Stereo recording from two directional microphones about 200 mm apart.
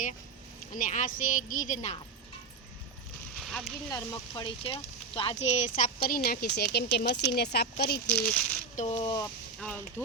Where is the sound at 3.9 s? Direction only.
20° left (ahead or behind); by 7.6 s 55° left (ahead or behind).